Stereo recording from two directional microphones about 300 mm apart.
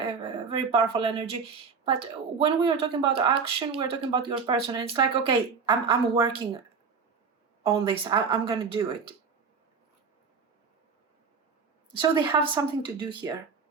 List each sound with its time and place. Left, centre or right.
0.0 s speech: centre
2.6 s speech: centre
7.6 s speech: centre
11.9 s speech: centre